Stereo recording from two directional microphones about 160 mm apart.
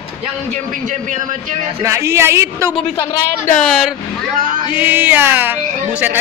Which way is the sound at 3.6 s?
Centre (ahead or behind).